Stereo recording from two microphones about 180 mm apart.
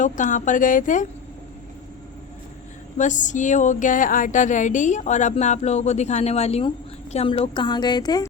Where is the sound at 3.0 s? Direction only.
45° left (ahead or behind); by 8.3 s 25° left (ahead or behind).